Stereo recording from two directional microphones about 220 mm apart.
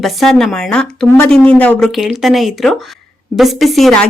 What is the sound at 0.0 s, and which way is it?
A woman's voice, centre (ahead or behind).